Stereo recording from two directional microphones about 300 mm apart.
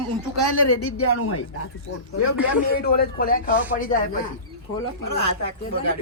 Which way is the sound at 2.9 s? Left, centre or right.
Left.